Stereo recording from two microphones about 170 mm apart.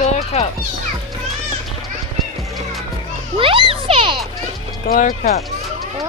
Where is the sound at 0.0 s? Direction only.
40° left (ahead or behind).